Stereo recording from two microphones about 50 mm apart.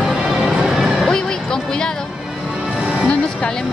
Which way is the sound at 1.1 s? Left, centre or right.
Centre.